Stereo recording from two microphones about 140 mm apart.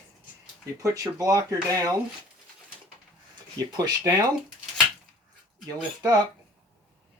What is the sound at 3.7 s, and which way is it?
Speech, 30° right (ahead or behind).